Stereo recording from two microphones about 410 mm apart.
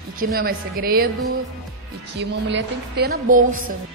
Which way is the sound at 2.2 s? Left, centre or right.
Right.